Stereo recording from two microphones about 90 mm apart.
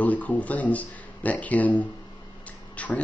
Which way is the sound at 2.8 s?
15° left (ahead or behind).